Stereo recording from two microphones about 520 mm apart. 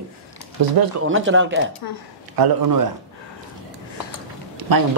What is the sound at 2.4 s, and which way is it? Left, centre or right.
Speech, right.